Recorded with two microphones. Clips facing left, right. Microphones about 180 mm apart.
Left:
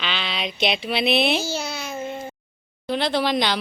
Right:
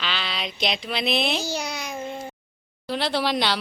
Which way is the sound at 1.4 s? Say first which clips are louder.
Left 1 dB; 15° right (ahead or behind).